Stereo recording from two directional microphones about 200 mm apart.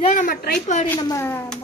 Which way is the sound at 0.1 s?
40° left (ahead or behind).